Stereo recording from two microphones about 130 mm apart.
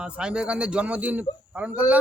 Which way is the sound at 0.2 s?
5° right (ahead or behind).